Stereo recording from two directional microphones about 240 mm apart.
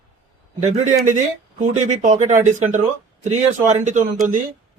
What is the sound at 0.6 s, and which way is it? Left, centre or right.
Speech, right.